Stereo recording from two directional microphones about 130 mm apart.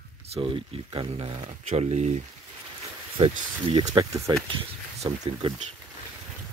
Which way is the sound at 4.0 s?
25° right (ahead or behind).